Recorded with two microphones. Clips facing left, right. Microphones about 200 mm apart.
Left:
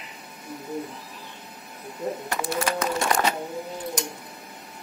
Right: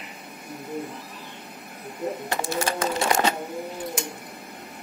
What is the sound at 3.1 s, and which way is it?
Sewing machine, 25° right (ahead or behind).